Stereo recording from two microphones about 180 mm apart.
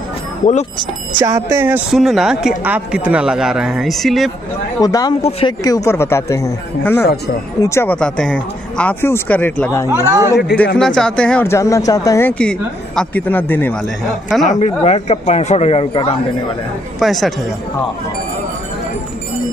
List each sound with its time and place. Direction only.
1.2 s speech: 15° right (ahead or behind)
1.9 s speech: centre (ahead or behind)
4.7 s speech: 20° left (ahead or behind)
9.8 s speech: 15° right (ahead or behind)
10.3 s a man's voice: 65° left (ahead or behind)
10.8 s speech: 5° left (ahead or behind)
14.6 s a man's voice: 35° left (ahead or behind)
17.0 s speech: centre (ahead or behind)